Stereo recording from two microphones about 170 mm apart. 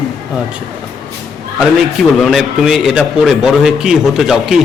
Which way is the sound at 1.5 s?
Centre (ahead or behind).